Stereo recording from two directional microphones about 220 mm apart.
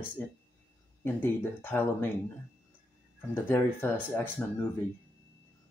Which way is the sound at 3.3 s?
10° left (ahead or behind).